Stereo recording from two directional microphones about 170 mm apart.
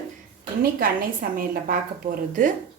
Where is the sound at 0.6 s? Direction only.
60° right (ahead or behind).